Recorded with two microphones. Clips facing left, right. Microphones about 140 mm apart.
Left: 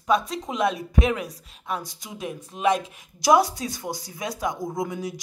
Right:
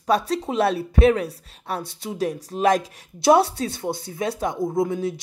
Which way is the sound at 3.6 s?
30° right (ahead or behind).